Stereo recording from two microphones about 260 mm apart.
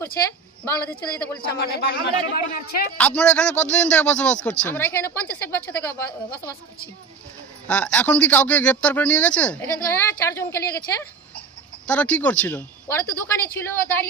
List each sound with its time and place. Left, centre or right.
0.6 s a man's voice: centre
1.4 s speech: left
3.0 s speech: centre
7.7 s speech: centre